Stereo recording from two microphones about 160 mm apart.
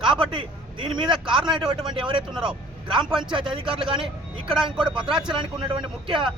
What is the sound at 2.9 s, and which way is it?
Speech, 30° right (ahead or behind).